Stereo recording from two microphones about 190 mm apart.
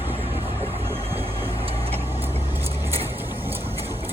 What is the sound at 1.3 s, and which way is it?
Vehicle, 30° right (ahead or behind).